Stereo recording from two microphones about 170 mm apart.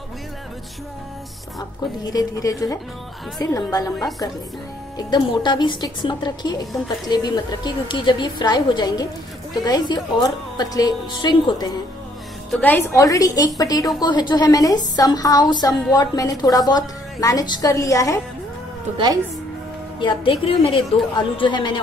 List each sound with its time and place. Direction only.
2.1 s a woman's voice: 20° left (ahead or behind)
12.4 s a woman's voice: 10° left (ahead or behind)
20.0 s a woman's voice: 30° left (ahead or behind)